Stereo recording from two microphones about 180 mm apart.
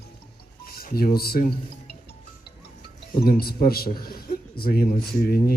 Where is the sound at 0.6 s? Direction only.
55° left (ahead or behind).